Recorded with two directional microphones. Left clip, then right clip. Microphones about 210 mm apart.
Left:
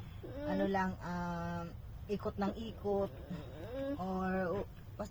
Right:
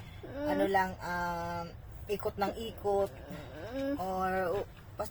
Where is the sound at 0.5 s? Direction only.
45° right (ahead or behind).